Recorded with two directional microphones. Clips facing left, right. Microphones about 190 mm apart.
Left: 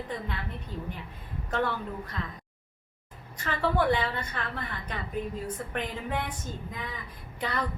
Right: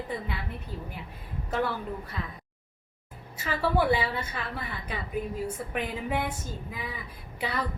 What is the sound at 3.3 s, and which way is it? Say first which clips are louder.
A woman's voice: right 1 dB; 5° right (ahead or behind).